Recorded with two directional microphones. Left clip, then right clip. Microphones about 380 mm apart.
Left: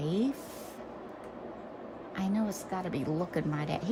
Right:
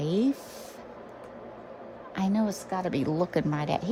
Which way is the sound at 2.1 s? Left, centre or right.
Centre.